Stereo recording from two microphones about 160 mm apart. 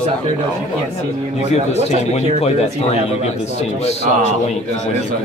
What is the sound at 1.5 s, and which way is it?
A man's voice, 40° left (ahead or behind).